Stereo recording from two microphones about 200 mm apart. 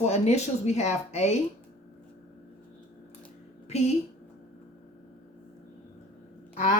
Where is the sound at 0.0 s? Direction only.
35° left (ahead or behind).